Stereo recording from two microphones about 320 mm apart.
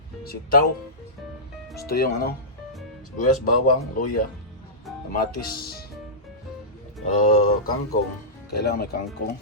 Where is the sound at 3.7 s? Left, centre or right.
Left.